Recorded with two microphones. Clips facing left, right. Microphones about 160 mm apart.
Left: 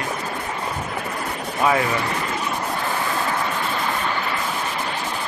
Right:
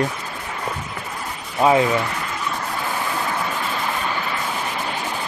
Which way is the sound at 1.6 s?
20° right (ahead or behind).